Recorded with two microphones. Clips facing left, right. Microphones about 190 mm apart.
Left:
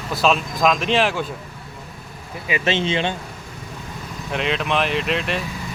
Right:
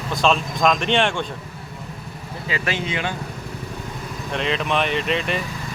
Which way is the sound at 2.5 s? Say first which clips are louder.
Left 5 dB; 25° left (ahead or behind).